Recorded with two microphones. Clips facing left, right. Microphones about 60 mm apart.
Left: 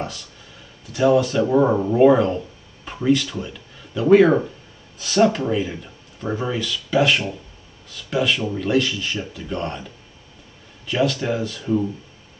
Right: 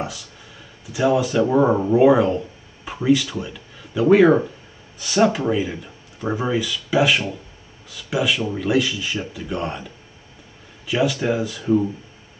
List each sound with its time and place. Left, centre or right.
0.0 s speech: centre
10.9 s speech: centre